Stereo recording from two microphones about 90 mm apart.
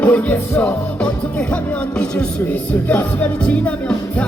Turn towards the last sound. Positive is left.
turn(degrees=20)  # may be behind; listen again after turning